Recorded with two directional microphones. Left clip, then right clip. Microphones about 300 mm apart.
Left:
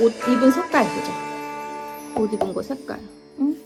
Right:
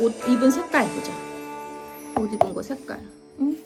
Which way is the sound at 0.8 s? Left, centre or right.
Left.